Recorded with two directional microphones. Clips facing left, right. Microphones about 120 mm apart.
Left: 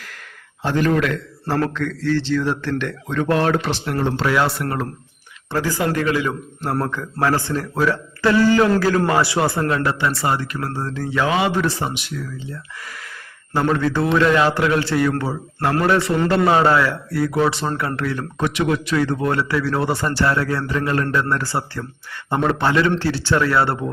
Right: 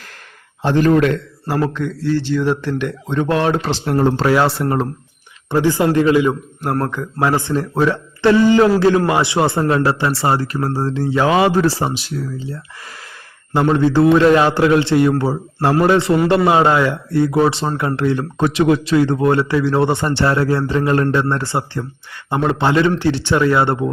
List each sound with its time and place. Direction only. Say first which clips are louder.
0.6 s speech: right 5 dB; 30° right (ahead or behind)
1.7 s speech: right 2 dB; 15° right (ahead or behind)
3.6 s speech: right 5 dB; 30° right (ahead or behind)